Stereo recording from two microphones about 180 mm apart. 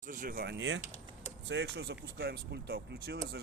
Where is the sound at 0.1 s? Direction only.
50° right (ahead or behind).